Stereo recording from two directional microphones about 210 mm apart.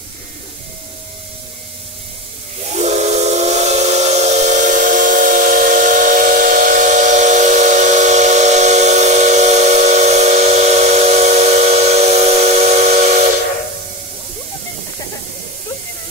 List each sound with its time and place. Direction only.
2.7 s steam whistle: 30° right (ahead or behind)